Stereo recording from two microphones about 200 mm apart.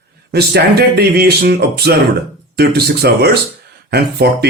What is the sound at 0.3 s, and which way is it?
Speech, 55° right (ahead or behind).